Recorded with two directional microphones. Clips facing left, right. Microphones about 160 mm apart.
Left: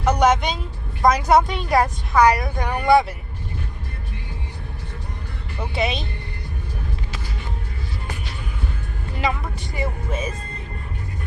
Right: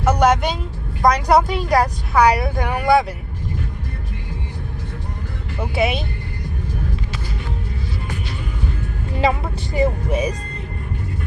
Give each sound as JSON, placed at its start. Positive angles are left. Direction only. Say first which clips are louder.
{"t": 0.0, "sound": "a woman's voice", "louder": "right 2 dB", "side_deg": 0}
{"t": 5.5, "sound": "speech", "louder": "right 4 dB", "side_deg": -5}
{"t": 9.2, "sound": "speech", "louder": "right 5 dB", "side_deg": -30}
{"t": 10.1, "sound": "speech", "louder": "right 6 dB", "side_deg": -15}